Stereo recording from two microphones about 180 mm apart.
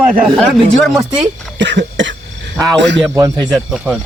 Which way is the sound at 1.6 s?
80° right.